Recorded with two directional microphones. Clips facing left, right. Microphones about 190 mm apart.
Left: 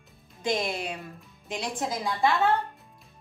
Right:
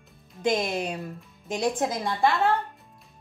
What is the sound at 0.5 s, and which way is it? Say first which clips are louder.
Speech: even; centre (ahead or behind).